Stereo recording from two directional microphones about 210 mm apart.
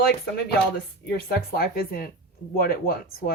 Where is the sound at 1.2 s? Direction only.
45° left (ahead or behind).